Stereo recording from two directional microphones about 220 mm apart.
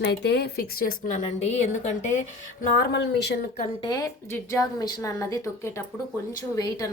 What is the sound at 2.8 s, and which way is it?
Speech, 50° left (ahead or behind).